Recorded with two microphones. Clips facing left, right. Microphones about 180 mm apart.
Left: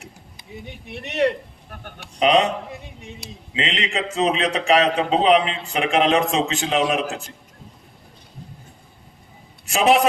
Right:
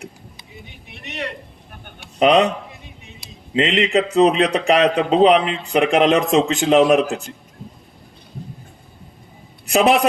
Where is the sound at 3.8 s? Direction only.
35° right (ahead or behind).